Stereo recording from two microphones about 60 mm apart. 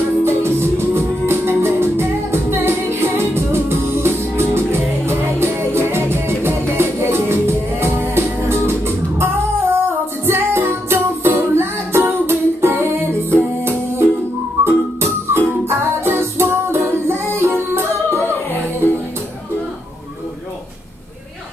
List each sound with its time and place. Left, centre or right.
0.2 s music: right